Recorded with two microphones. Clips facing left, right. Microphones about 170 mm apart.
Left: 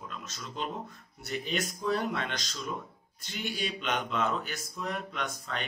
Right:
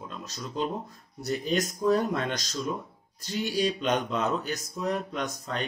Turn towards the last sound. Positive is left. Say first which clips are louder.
# right 4 dB
turn(degrees=-40)  # may be behind; listen again after turning